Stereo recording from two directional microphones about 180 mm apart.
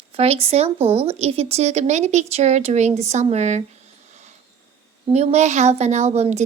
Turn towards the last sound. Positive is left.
turn(degrees=-35)  # may be behind; listen again after turning